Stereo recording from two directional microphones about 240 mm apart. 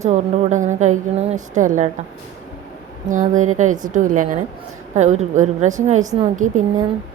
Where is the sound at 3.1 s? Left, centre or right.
Right.